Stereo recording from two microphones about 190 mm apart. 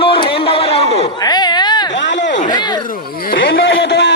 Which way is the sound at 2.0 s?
70° left (ahead or behind).